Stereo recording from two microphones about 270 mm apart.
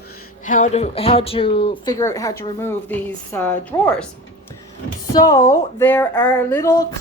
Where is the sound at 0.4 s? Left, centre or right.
Left; by 3.9 s centre.